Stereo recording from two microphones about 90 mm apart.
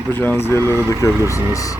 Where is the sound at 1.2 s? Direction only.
35° left (ahead or behind).